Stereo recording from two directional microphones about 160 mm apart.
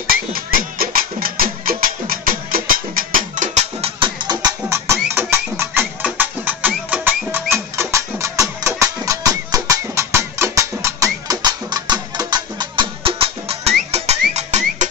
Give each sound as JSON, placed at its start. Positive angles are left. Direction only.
{"t": 0.1, "sound": "music", "side_deg": -65}
{"t": 4.0, "sound": "music", "side_deg": -25}